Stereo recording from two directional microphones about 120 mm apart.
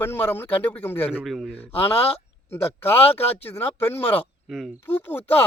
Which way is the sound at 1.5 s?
15° left (ahead or behind).